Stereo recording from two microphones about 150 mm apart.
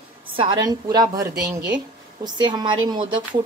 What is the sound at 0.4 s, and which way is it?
A woman's voice, 30° right (ahead or behind).